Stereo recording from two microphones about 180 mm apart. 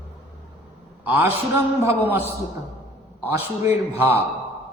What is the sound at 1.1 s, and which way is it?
Speech, 10° right (ahead or behind).